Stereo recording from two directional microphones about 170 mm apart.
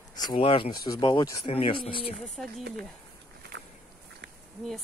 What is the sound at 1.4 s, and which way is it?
Speech, 35° left (ahead or behind).